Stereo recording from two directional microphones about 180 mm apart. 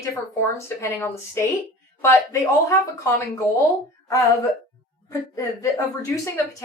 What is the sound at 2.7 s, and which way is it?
Speech, 15° left (ahead or behind).